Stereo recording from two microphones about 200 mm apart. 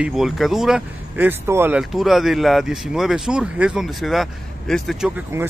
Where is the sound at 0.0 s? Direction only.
Centre (ahead or behind).